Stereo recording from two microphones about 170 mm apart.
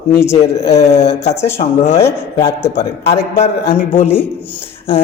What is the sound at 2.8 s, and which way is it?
Speech, 40° left (ahead or behind).